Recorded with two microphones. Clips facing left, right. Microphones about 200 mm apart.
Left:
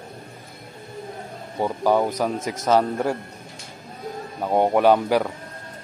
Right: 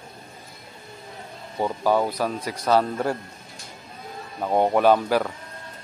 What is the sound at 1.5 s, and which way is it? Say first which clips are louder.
Speech: left 2 dB; 15° left (ahead or behind).